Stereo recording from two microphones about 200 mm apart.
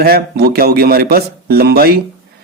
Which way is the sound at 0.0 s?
50° right (ahead or behind).